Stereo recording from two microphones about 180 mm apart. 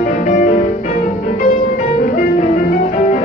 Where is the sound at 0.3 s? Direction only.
40° left (ahead or behind).